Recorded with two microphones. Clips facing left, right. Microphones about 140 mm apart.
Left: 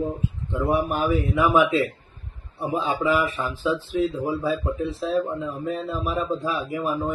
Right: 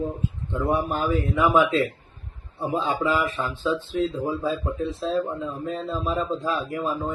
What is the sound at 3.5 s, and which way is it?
Speech, 10° left (ahead or behind).